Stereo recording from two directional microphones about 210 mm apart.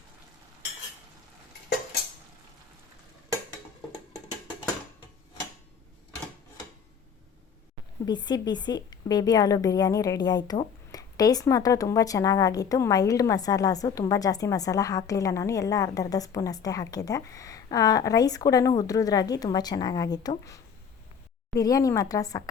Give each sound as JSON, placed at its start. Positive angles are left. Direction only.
{"t": 8.0, "sound": "a woman's voice", "side_deg": 20}
{"t": 21.6, "sound": "a woman's voice", "side_deg": 15}